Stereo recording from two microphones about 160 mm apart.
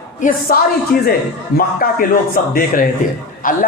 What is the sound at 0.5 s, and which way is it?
A man's voice, 60° left (ahead or behind).